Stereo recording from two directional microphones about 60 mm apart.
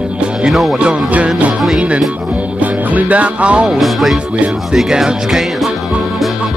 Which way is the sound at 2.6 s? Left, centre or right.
Right.